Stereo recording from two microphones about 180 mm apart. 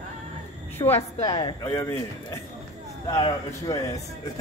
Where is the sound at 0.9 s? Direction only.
35° left (ahead or behind).